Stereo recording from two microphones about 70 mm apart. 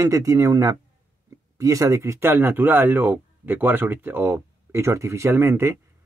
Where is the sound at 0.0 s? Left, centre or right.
Right.